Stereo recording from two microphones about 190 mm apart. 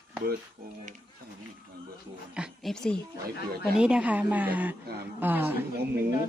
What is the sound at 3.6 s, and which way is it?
A woman's voice, 5° right (ahead or behind).